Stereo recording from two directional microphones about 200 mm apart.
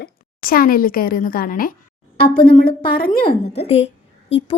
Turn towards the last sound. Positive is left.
turn(degrees=30)  # may be behind; listen again after turning